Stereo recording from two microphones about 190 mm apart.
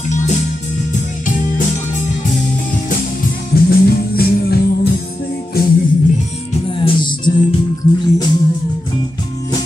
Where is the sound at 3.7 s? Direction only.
55° left (ahead or behind).